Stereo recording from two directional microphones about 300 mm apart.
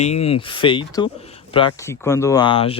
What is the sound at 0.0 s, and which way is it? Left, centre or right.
Speech, left.